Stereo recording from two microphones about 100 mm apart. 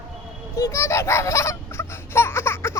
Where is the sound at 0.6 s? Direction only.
30° left (ahead or behind).